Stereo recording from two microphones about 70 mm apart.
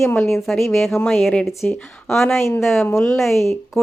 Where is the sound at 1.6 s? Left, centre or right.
Centre.